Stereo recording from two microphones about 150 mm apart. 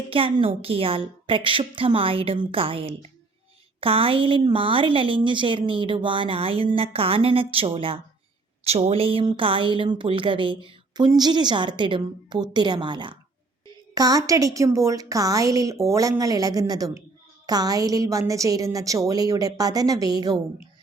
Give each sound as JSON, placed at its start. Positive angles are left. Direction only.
{"t": 0.1, "sound": "a woman's voice", "side_deg": -35}